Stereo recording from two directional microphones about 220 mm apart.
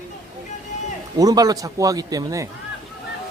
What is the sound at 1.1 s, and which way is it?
A man's voice, 15° right (ahead or behind).